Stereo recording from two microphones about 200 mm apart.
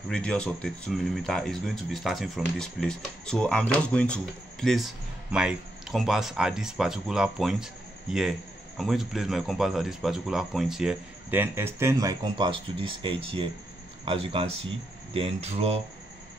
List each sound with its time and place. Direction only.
0.1 s speech: 5° left (ahead or behind); by 15.8 s 30° right (ahead or behind)